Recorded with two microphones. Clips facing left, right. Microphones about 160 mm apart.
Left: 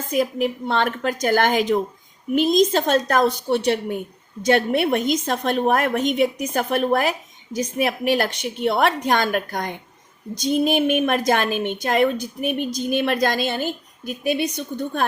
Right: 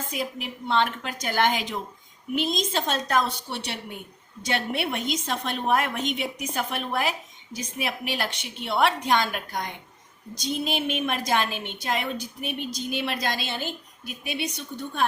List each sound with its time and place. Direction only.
0.1 s a woman's voice: 45° left (ahead or behind)